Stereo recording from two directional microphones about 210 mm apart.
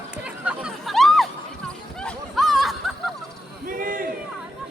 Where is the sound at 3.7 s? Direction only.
40° right (ahead or behind).